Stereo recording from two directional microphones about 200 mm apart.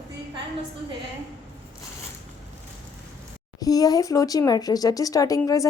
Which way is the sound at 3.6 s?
20° left (ahead or behind).